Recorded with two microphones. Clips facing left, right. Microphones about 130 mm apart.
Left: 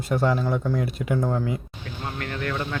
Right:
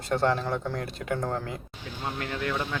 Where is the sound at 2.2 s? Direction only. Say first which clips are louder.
Left 2 dB; 15° right (ahead or behind).